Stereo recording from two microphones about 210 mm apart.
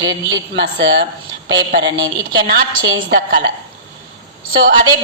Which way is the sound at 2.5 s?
50° right (ahead or behind).